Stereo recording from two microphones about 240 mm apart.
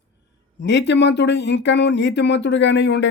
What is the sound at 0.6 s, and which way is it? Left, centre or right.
Speech, left.